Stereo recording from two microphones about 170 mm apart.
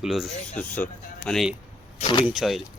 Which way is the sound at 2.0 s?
30° left (ahead or behind).